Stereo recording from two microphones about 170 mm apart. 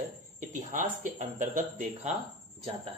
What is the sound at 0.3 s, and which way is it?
Speech, 45° right (ahead or behind).